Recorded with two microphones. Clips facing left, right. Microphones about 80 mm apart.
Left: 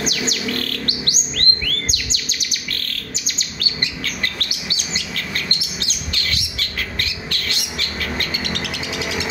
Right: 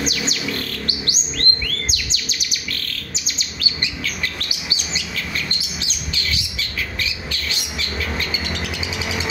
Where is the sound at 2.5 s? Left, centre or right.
Left.